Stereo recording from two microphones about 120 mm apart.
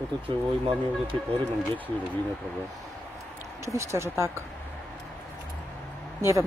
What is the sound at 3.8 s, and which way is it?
Speech, 25° right (ahead or behind).